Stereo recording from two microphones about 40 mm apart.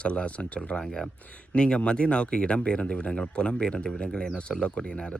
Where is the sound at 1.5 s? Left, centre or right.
Left.